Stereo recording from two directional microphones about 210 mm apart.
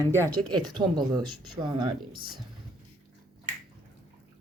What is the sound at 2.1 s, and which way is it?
Speech, 45° right (ahead or behind).